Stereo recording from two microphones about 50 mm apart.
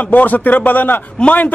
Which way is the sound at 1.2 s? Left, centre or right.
Left.